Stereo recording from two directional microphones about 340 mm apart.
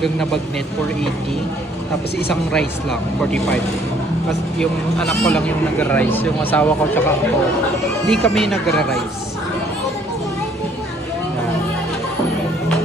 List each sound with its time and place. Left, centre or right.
0.0 s speech: centre
3.2 s speech: centre
4.6 s speech: centre